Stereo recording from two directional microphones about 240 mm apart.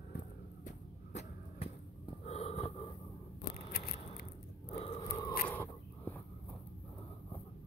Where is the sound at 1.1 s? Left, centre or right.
Left.